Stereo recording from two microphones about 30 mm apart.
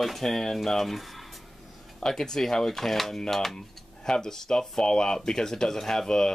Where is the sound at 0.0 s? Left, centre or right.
Centre.